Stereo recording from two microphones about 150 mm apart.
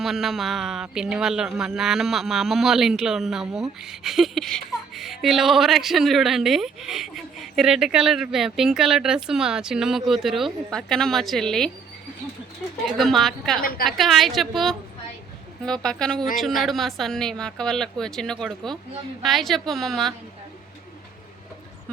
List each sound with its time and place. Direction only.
0.0 s speech: centre (ahead or behind)
12.8 s speech: centre (ahead or behind)
13.6 s a woman's voice: 80° left
13.8 s speech: centre (ahead or behind)